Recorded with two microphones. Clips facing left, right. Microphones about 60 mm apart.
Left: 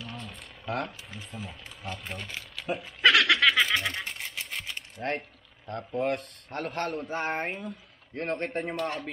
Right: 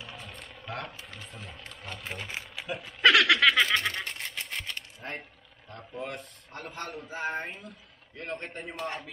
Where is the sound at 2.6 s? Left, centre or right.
Centre.